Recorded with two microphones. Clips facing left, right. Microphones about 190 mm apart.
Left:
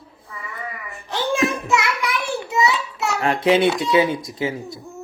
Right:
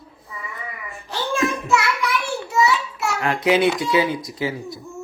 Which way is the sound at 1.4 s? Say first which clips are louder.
Right 1 dB; 35° left (ahead or behind).